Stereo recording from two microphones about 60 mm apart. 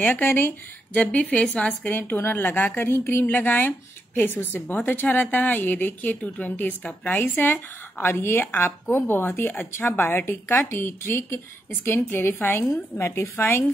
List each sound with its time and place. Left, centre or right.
0.0 s a woman's voice: left
0.9 s a woman's voice: left
1.9 s a woman's voice: left